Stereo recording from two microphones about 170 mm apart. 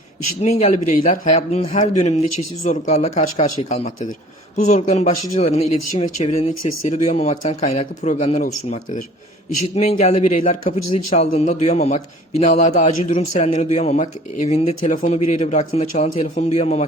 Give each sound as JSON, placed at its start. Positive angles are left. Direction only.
{"t": 0.4, "sound": "speech", "side_deg": 40}
{"t": 10.0, "sound": "speech", "side_deg": 40}